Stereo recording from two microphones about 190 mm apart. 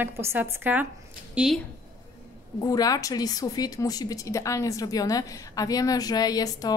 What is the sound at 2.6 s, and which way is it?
A woman's voice, 20° left (ahead or behind).